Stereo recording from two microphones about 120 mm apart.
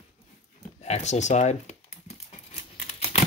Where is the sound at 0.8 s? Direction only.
70° left (ahead or behind).